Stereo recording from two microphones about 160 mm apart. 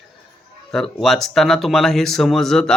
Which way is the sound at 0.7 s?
Centre (ahead or behind).